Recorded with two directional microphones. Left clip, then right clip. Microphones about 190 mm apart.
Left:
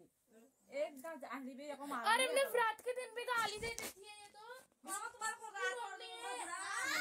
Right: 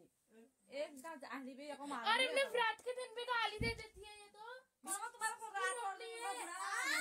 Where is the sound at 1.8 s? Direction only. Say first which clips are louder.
Left 1 dB; 25° left (ahead or behind); by 3.4 s 40° left (ahead or behind).